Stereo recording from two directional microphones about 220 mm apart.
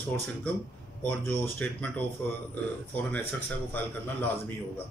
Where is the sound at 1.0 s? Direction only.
10° left (ahead or behind).